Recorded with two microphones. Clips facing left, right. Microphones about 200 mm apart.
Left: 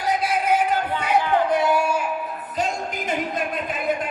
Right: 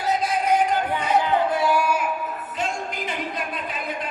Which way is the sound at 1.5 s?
20° left (ahead or behind).